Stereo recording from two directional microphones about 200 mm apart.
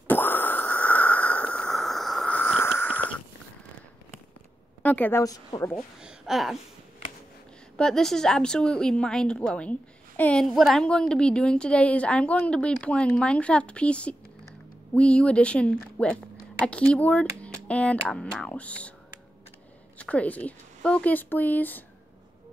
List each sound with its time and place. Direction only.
0.1 s a sound: 10° left (ahead or behind)
2.8 s wheeze: 10° left (ahead or behind)
4.8 s speech: 10° left (ahead or behind)
5.9 s a woman's voice: 5° right (ahead or behind)
7.7 s a woman's voice: 5° left (ahead or behind)
20.0 s speech: 5° left (ahead or behind)